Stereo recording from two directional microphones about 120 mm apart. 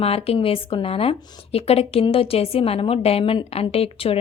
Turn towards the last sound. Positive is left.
turn(degrees=55)  # may be behind; listen again after turning